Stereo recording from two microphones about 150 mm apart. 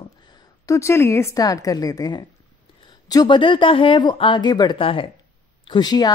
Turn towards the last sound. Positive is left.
turn(degrees=25)  # may be behind; listen again after turning